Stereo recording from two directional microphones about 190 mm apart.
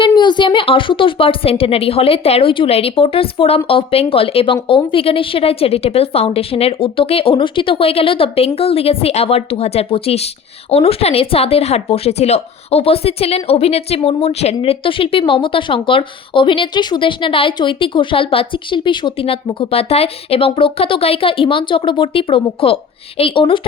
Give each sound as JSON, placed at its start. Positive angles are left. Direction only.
{"t": 0.0, "sound": "a woman's voice", "side_deg": 25}